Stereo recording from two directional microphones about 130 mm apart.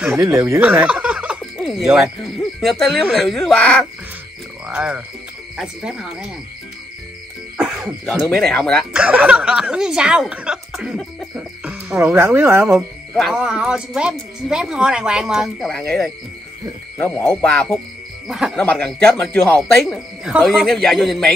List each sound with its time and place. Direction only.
0.0 s speech: 5° right (ahead or behind)
4.6 s speech: 10° right (ahead or behind)
7.5 s speech: 5° right (ahead or behind)
8.9 s speech: 10° right (ahead or behind)
11.3 s cricket: 15° right (ahead or behind)
12.7 s speech: centre (ahead or behind)
17.0 s speech: 15° left (ahead or behind)
18.3 s speech: 5° right (ahead or behind)
18.6 s speech: 10° left (ahead or behind)
19.7 s speech: centre (ahead or behind)